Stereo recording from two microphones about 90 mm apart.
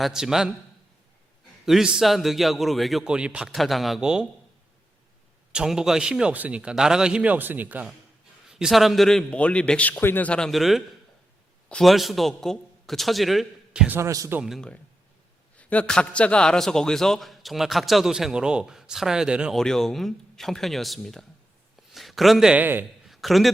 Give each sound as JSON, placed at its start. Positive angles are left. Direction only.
{"t": 0.0, "sound": "a man's voice", "side_deg": -5}
{"t": 1.6, "sound": "a man's voice", "side_deg": -5}
{"t": 3.5, "sound": "a man's voice", "side_deg": 0}
{"t": 5.5, "sound": "a man's voice", "side_deg": -10}
{"t": 8.4, "sound": "a man's voice", "side_deg": -5}
{"t": 10.5, "sound": "a man's voice", "side_deg": 0}
{"t": 14.0, "sound": "speech", "side_deg": -40}
{"t": 15.5, "sound": "a man's voice", "side_deg": 15}
{"t": 19.5, "sound": "a man's voice", "side_deg": 5}
{"t": 22.5, "sound": "a man's voice", "side_deg": -20}
{"t": 23.0, "sound": "a sound", "side_deg": 0}